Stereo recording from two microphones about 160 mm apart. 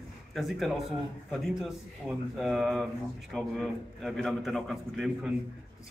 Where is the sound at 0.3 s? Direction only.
Centre (ahead or behind).